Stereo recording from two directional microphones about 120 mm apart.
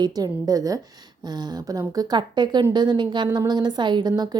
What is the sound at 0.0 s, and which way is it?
A woman's voice, 30° right (ahead or behind).